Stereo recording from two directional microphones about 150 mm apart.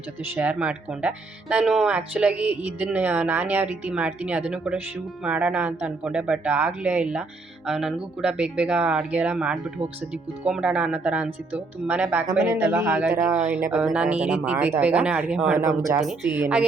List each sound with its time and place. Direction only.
0.3 s speech: 10° right (ahead or behind)
15.5 s speech: 20° right (ahead or behind)
16.0 s speech: 5° right (ahead or behind)